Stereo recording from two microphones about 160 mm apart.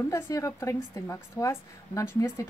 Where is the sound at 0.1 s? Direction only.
20° left (ahead or behind).